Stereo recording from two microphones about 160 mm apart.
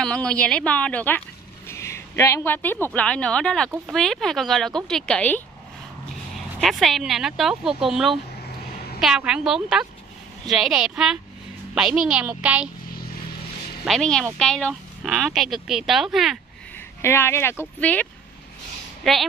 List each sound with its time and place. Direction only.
0.0 s a child's voice: 5° left (ahead or behind)
13.8 s speech: 5° left (ahead or behind)
16.7 s speech: 15° left (ahead or behind)
19.1 s speech: centre (ahead or behind)